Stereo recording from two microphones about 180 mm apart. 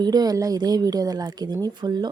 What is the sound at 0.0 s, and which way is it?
A woman's voice, 20° right (ahead or behind).